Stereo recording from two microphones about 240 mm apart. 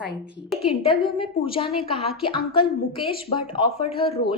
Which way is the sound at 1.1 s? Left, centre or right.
Left.